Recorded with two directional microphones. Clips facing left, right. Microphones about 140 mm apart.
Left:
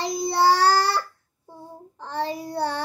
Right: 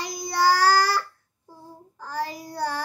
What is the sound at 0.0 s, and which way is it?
Child singing, 30° left (ahead or behind).